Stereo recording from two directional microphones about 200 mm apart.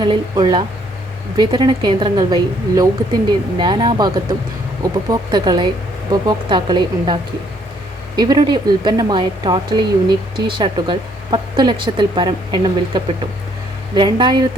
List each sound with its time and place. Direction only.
0.0 s a woman's voice: 20° right (ahead or behind)